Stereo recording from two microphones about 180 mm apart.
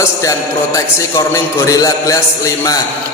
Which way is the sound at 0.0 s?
15° left (ahead or behind).